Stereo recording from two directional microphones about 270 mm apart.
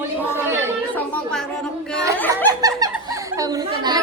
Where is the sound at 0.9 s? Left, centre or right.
Centre.